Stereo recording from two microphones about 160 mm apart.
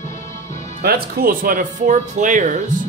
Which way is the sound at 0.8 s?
70° right (ahead or behind).